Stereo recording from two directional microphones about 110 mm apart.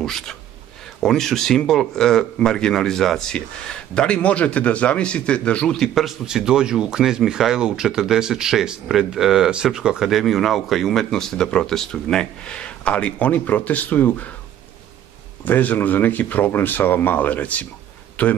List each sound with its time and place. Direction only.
0.0 s speech: 5° left (ahead or behind)
15.4 s speech: 15° left (ahead or behind)